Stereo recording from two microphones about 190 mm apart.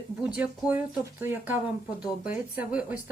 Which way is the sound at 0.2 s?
5° right (ahead or behind).